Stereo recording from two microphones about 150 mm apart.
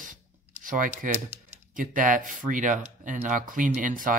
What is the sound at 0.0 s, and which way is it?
Rub, 60° right (ahead or behind).